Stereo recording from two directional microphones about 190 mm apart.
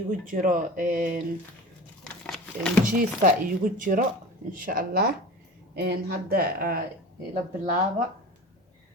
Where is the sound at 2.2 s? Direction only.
5° left (ahead or behind).